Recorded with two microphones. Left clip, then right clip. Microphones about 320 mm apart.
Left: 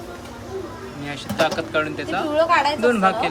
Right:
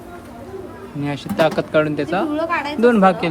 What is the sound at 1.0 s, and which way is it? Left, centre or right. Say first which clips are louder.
Speech: right 4 dB; centre.